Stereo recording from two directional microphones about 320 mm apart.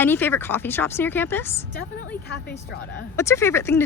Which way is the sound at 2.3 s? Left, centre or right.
Left.